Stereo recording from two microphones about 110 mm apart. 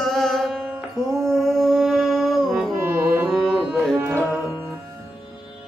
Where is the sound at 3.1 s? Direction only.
Centre (ahead or behind).